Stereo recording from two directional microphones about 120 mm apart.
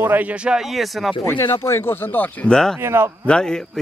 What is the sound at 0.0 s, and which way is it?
Speech, 15° right (ahead or behind).